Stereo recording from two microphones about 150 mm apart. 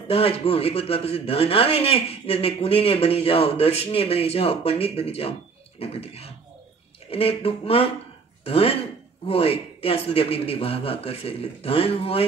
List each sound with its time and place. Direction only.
0.1 s speech: 40° left (ahead or behind)